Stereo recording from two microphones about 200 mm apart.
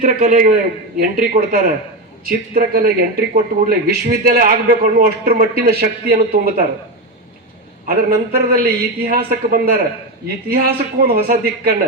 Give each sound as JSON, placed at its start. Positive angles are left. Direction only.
{"t": 0.0, "sound": "speech", "side_deg": -40}
{"t": 7.9, "sound": "speech", "side_deg": -50}